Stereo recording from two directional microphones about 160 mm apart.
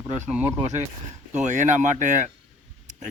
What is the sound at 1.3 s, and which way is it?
Speech, 50° right (ahead or behind).